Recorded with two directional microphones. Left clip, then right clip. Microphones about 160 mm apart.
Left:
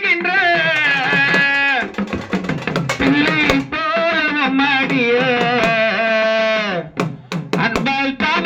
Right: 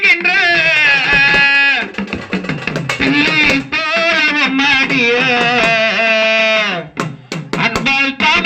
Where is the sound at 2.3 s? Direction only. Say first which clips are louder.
Right 2 dB; 40° right (ahead or behind).